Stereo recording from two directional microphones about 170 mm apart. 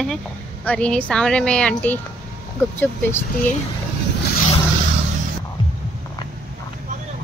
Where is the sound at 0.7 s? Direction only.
5° left (ahead or behind).